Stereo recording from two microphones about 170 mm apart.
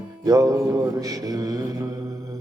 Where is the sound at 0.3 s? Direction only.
20° right (ahead or behind).